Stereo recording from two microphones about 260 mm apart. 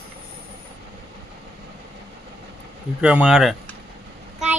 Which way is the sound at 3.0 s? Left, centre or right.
Centre.